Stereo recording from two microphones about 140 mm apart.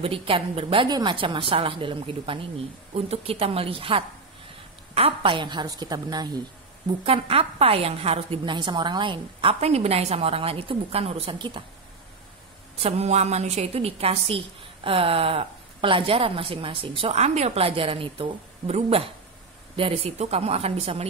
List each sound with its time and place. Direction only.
0.0 s a woman's voice: 40° right (ahead or behind)
7.1 s a woman's voice: 45° right (ahead or behind)
8.5 s a woman's voice: 35° right (ahead or behind)
12.8 s a woman's voice: 50° right (ahead or behind)